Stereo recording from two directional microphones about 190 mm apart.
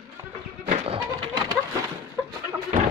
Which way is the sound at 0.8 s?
25° right (ahead or behind).